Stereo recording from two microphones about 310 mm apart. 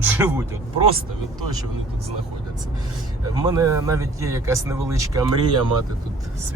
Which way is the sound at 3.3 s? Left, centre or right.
Centre.